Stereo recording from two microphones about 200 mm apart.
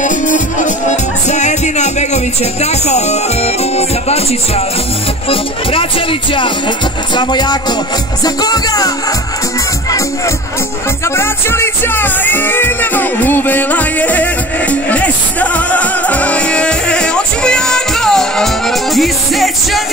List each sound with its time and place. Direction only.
0.0 s music: 40° left (ahead or behind)
2.6 s speech: 35° left (ahead or behind)
5.3 s music: 25° left (ahead or behind); by 19.8 s centre (ahead or behind)